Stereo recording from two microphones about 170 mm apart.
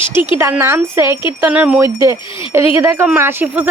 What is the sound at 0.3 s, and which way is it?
Speech, 15° right (ahead or behind).